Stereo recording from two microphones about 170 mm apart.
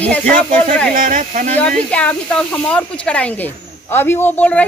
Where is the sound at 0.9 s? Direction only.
55° right (ahead or behind).